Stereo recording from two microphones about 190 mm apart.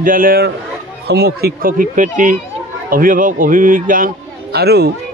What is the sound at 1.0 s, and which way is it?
A man's voice, 60° right (ahead or behind).